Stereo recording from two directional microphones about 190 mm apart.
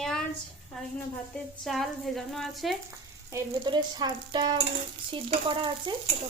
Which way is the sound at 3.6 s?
25° right (ahead or behind).